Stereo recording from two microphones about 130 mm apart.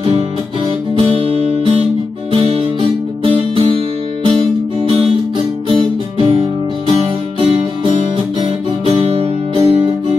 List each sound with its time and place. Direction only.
0.9 s music: 45° right (ahead or behind)